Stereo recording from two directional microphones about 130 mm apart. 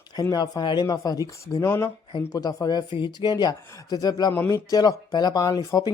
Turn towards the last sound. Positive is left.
turn(degrees=30)  # may be behind; listen again after turning